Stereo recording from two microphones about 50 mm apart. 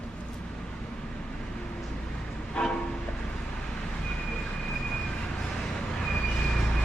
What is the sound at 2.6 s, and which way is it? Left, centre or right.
Train, centre.